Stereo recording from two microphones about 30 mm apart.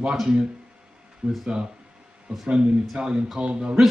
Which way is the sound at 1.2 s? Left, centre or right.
Right.